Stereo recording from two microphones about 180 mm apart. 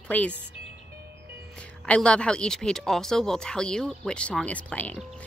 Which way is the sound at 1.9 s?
5° left (ahead or behind).